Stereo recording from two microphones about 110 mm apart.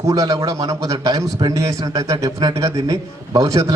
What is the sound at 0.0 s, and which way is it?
A man's voice, 30° right (ahead or behind).